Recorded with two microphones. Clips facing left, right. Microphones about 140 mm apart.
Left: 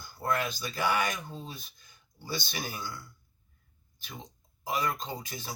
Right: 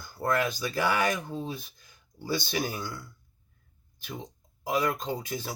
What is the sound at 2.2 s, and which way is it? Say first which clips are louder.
Speech: right 7 dB; 45° right (ahead or behind).